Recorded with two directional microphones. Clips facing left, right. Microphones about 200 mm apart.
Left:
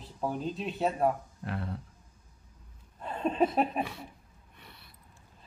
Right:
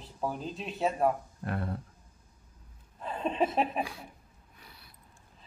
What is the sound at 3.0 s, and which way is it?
A man's voice, centre (ahead or behind).